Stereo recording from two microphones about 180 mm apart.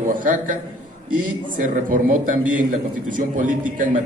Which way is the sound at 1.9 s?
50° right (ahead or behind).